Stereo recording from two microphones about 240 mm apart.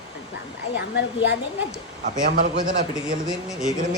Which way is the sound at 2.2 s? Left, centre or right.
Right.